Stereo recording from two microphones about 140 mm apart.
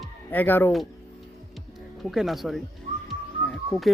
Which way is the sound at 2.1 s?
Centre (ahead or behind).